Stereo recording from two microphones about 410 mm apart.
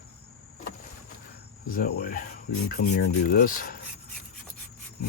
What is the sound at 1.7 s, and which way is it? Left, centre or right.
Speech, left.